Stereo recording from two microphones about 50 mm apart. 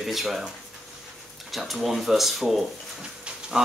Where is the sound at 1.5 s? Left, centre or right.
Centre.